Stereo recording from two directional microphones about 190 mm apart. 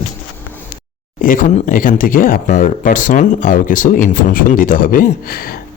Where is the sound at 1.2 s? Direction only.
45° left (ahead or behind).